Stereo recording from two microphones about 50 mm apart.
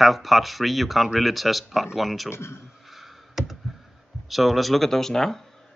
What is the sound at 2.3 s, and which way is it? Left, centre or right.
Speech, left.